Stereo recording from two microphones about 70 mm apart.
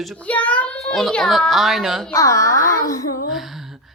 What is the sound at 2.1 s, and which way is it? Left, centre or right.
Speech, left.